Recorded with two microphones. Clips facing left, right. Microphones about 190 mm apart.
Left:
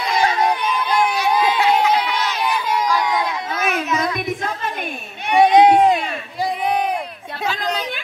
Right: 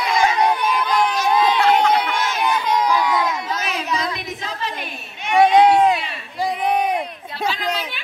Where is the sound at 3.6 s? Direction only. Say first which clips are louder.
Left 3 dB; 55° left (ahead or behind).